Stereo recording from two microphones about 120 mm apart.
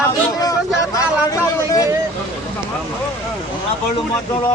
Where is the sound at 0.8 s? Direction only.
30° left (ahead or behind).